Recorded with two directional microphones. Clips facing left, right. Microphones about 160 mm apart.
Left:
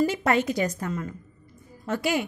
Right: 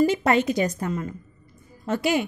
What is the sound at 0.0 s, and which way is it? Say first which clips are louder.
A woman's voice: right 3 dB; 20° right (ahead or behind).